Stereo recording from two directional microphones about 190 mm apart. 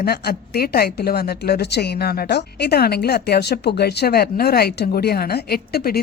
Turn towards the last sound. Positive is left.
turn(degrees=55)  # may be behind; listen again after turning